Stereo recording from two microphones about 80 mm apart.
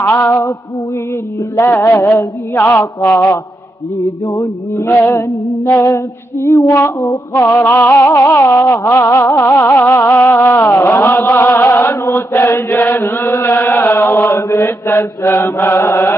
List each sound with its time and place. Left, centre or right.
0.0 s a sound: left
1.6 s music: left
2.0 s mantra: left
4.3 s mantra: left
7.4 s music: left
8.2 s mantra: left
9.6 s music: left
12.1 s mantra: left
12.6 s chant: left
14.6 s music: left